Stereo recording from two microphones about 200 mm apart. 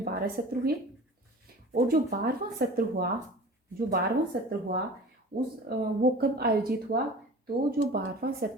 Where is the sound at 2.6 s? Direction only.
50° right (ahead or behind).